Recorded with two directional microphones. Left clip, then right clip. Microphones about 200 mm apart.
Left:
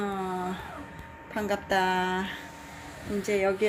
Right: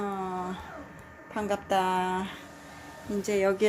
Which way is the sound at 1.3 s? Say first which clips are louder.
Even; 5° right (ahead or behind).